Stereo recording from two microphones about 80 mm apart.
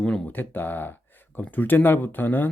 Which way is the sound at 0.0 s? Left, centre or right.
Centre.